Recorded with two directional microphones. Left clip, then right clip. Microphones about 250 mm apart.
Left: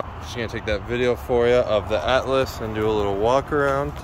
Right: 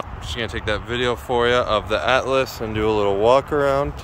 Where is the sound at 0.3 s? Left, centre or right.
Centre.